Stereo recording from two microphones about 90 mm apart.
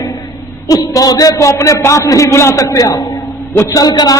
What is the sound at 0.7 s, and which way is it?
A man's voice, 45° left (ahead or behind).